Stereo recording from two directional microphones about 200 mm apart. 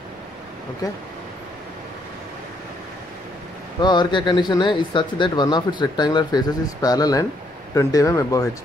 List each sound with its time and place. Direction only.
3.8 s speech: 20° left (ahead or behind)